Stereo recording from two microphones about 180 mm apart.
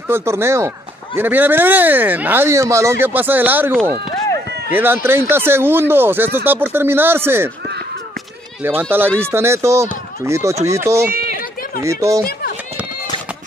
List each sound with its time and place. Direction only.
0.1 s speech: 15° right (ahead or behind)
9.2 s speech: 15° right (ahead or behind)
11.1 s a sound: 55° right (ahead or behind)
11.8 s speech: 15° right (ahead or behind)